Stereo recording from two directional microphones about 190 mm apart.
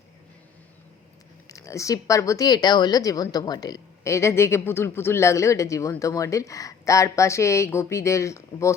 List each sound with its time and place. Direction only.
1.5 s speech: 15° left (ahead or behind)